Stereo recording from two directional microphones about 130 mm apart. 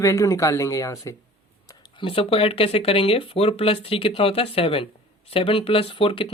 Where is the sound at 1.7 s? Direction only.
40° left (ahead or behind).